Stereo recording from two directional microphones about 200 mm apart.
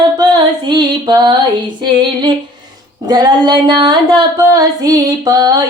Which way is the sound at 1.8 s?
25° right (ahead or behind).